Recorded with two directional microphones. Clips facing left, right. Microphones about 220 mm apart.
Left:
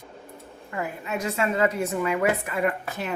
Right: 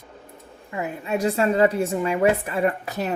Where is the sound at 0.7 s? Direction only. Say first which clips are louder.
Right 4 dB; 25° right (ahead or behind).